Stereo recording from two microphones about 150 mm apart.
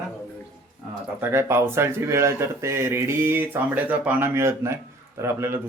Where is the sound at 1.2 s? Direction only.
15° right (ahead or behind).